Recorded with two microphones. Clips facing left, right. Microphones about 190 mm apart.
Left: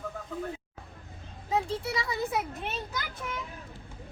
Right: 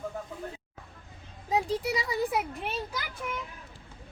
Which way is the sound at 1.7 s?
40° right (ahead or behind).